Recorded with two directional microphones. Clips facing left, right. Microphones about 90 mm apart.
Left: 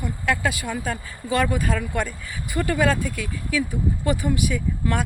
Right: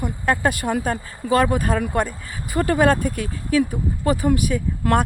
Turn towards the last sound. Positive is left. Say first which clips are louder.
# right 6 dB
turn(degrees=-55)  # may be behind; listen again after turning